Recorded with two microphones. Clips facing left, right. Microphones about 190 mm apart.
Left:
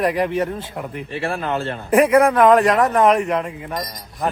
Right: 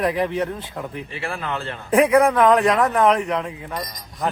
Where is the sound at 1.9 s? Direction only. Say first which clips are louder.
Left 2 dB; centre (ahead or behind).